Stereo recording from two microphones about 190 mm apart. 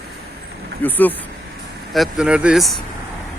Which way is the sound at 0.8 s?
10° left (ahead or behind).